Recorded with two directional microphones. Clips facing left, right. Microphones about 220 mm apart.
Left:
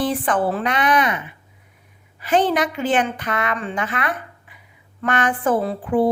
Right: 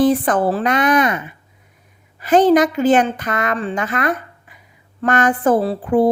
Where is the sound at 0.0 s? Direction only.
40° right (ahead or behind).